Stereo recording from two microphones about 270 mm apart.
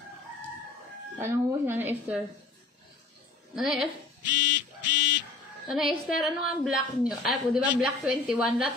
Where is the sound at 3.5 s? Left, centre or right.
Centre.